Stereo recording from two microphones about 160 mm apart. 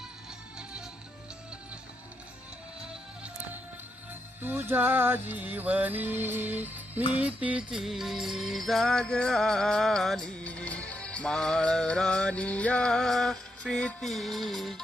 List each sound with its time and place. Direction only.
4.4 s music: 15° right (ahead or behind)